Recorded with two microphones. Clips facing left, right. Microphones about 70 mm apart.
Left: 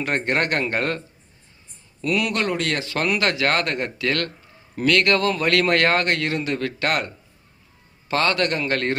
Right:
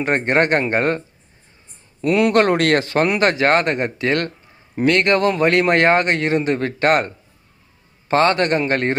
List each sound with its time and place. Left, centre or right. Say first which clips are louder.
0.0 s speech: right 5 dB; right
2.3 s speech: right 9 dB; right
3.0 s speech: right 2 dB; right